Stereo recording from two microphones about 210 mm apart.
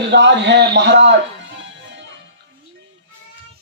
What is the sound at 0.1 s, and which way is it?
Speech, 55° right (ahead or behind).